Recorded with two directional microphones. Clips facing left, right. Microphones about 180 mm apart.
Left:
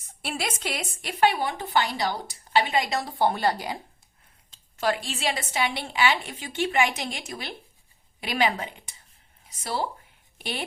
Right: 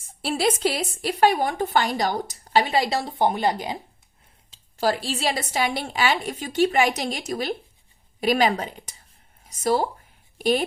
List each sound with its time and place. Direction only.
0.0 s speech: 30° right (ahead or behind)
4.8 s speech: 35° right (ahead or behind)